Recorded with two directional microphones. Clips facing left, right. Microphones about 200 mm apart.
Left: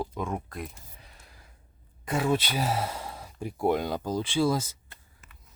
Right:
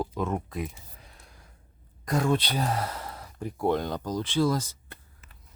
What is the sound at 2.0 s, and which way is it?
Speech, 5° left (ahead or behind).